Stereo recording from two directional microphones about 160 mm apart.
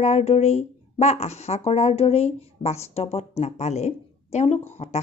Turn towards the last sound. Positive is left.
turn(degrees=45)  # may be behind; listen again after turning